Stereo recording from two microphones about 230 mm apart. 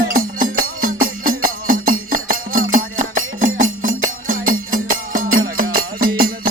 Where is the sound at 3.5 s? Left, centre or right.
Right.